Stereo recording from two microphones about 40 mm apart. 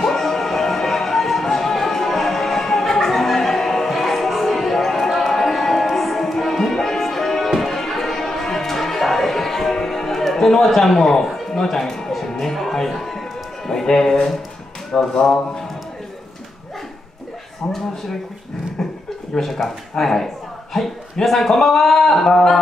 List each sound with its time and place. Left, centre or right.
0.0 s music: centre
15.0 s a man's voice: centre
17.6 s speech: left
18.8 s a sound: centre
19.3 s a man's voice: centre